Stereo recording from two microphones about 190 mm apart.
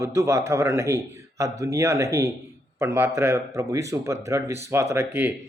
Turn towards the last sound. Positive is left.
turn(degrees=-10)  # may be behind; listen again after turning